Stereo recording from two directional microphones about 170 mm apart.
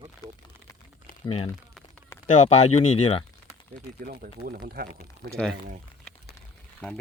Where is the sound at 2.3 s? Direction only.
40° left (ahead or behind).